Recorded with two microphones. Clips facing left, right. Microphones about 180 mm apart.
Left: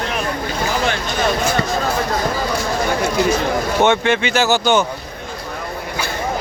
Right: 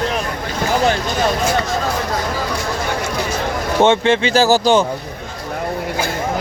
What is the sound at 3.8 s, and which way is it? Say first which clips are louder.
Speech: right 3 dB; 30° right (ahead or behind).